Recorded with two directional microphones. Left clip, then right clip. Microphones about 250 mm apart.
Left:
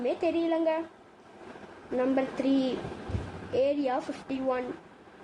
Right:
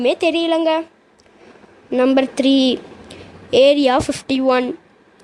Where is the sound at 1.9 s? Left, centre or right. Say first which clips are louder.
Right 13 dB; right.